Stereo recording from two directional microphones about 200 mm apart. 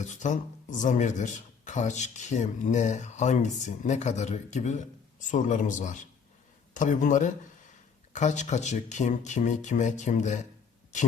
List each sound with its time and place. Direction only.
0.0 s speech: 35° left (ahead or behind)